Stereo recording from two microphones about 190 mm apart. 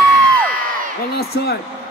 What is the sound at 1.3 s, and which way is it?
Speech, 60° left (ahead or behind).